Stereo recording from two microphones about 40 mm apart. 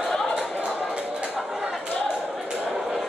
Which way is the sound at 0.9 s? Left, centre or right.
Right.